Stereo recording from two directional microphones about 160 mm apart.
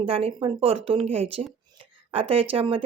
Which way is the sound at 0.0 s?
35° right (ahead or behind).